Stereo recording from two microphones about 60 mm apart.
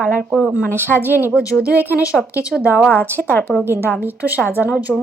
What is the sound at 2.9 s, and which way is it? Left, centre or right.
Speech, left.